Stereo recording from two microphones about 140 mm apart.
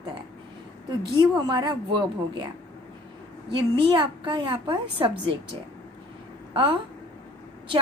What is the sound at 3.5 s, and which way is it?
A woman's voice, 35° right (ahead or behind).